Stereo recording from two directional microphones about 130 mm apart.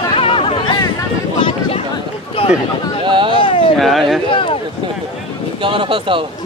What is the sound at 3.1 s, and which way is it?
Speech, 40° right (ahead or behind).